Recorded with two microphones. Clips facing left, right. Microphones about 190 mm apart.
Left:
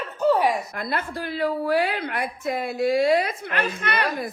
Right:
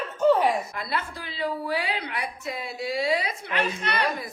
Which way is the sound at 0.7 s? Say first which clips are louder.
Left 3 dB; 50° left (ahead or behind).